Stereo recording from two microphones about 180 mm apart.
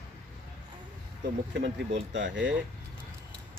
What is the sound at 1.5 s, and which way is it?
Speech, 80° right.